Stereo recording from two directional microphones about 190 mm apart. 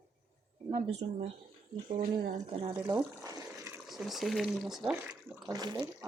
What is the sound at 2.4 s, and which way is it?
Speech, 25° right (ahead or behind).